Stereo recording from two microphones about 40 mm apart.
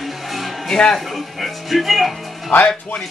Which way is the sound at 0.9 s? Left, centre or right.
Centre.